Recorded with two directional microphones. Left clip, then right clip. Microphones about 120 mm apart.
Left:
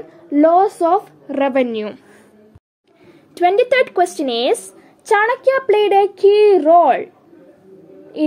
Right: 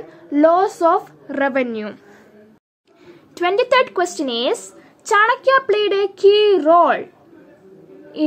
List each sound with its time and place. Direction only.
0.1 s a woman's voice: 30° left (ahead or behind)
1.3 s speech: 40° left (ahead or behind)
3.1 s a woman's voice: 20° left (ahead or behind)